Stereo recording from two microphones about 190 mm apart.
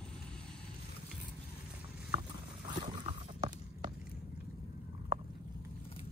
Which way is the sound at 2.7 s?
25° right (ahead or behind).